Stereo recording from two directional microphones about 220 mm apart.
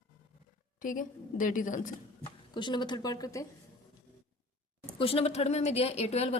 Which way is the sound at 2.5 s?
20° left (ahead or behind).